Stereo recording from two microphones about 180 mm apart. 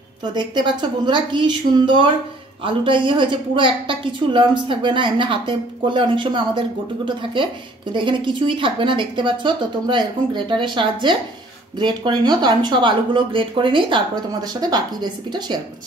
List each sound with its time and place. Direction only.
0.2 s a woman's voice: 25° right (ahead or behind)